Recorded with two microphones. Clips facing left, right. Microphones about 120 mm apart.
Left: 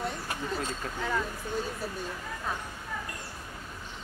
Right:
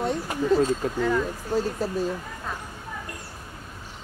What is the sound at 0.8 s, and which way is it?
Speech, 20° right (ahead or behind).